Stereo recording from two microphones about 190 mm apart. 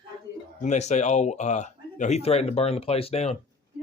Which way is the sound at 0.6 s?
35° left (ahead or behind).